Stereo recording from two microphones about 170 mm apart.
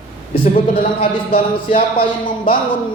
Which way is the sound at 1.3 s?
50° left (ahead or behind).